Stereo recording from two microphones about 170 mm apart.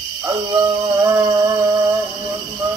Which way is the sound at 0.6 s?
25° right (ahead or behind).